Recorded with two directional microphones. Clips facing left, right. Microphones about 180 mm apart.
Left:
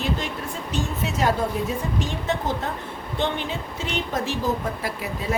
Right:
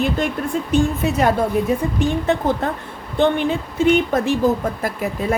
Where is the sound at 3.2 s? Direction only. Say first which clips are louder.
Right 9 dB; 55° right (ahead or behind).